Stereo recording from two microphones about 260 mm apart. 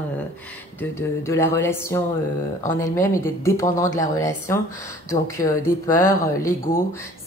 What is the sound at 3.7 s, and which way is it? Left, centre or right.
Speech, centre.